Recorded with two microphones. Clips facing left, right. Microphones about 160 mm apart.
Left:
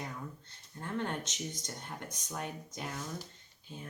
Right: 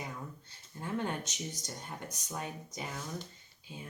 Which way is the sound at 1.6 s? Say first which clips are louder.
Even; 5° right (ahead or behind).